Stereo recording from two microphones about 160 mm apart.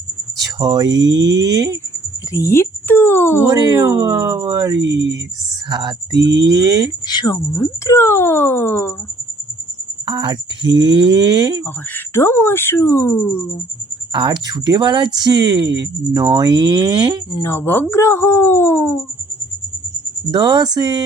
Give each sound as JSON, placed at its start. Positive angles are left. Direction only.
{"t": 0.3, "sound": "a sound", "side_deg": -25}
{"t": 0.9, "sound": "speech", "side_deg": -25}
{"t": 2.3, "sound": "speech", "side_deg": 15}
{"t": 3.4, "sound": "speech", "side_deg": -25}
{"t": 4.8, "sound": "speech", "side_deg": -90}
{"t": 5.6, "sound": "speech", "side_deg": -25}
{"t": 7.1, "sound": "speech", "side_deg": 25}
{"t": 10.1, "sound": "speech", "side_deg": -30}
{"t": 11.6, "sound": "speech", "side_deg": 15}
{"t": 14.1, "sound": "speech", "side_deg": -30}
{"t": 17.4, "sound": "speech", "side_deg": 15}
{"t": 20.3, "sound": "speech", "side_deg": -25}